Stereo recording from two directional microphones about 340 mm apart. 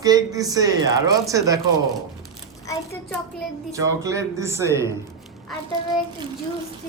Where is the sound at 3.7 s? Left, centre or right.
Centre.